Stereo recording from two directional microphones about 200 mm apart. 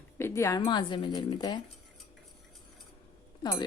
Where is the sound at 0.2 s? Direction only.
15° left (ahead or behind).